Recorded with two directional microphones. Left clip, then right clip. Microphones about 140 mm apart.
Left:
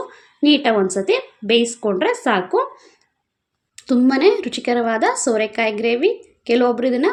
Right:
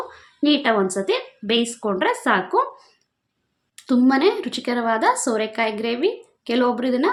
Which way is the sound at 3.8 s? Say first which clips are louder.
Left 2 dB; 15° left (ahead or behind).